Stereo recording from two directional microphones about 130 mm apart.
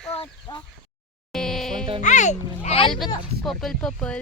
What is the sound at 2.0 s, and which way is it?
Speech, 70° left (ahead or behind).